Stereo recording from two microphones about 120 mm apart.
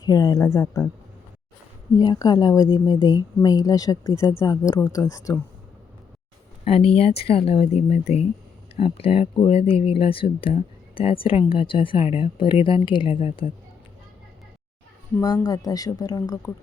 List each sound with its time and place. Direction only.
0.0 s a woman's voice: 30° left (ahead or behind)
2.0 s a woman's voice: 35° left (ahead or behind)
6.7 s speech: 55° left (ahead or behind)
15.2 s speech: 30° left (ahead or behind)